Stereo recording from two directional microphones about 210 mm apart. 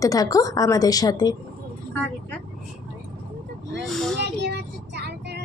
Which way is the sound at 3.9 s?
Centre (ahead or behind).